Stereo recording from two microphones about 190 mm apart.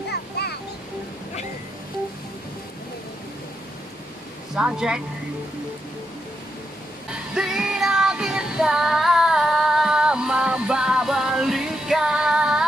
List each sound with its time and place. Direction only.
0.1 s music: 60° left (ahead or behind)
4.6 s speech: 5° right (ahead or behind)
7.3 s music: 5° right (ahead or behind)